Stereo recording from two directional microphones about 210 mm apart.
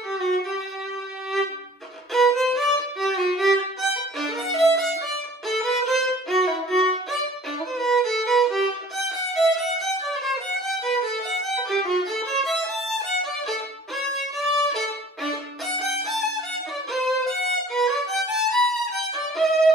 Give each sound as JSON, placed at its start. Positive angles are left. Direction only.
{"t": 0.1, "sound": "music", "side_deg": 0}
{"t": 2.1, "sound": "violin", "side_deg": 0}
{"t": 11.4, "sound": "violin", "side_deg": 0}